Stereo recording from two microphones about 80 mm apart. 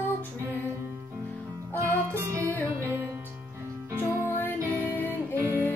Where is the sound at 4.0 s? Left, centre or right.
Left.